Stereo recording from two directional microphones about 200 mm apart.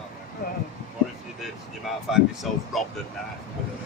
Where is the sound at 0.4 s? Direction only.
50° left (ahead or behind).